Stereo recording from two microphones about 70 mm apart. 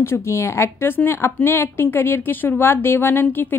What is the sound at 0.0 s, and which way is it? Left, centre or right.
A woman's voice, left.